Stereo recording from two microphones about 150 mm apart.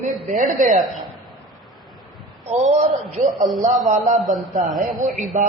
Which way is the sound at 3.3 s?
Centre (ahead or behind).